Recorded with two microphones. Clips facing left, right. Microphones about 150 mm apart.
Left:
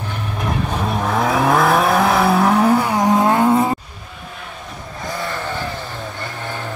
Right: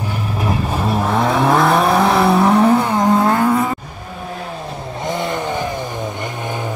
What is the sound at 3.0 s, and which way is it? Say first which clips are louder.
Vehicle: even; 15° left (ahead or behind).